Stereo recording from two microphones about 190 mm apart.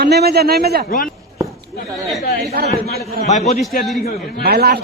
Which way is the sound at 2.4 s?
55° right (ahead or behind).